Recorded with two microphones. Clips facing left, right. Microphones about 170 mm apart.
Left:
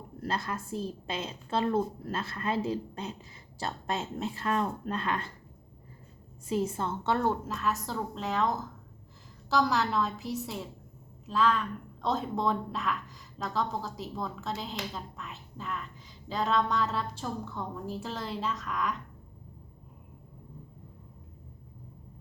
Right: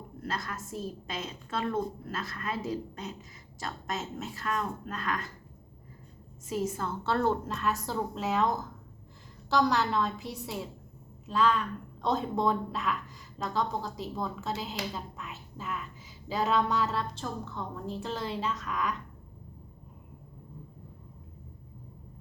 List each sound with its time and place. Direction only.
0.2 s a woman's voice: 30° left (ahead or behind)
6.5 s a woman's voice: 30° left (ahead or behind); by 18.9 s centre (ahead or behind)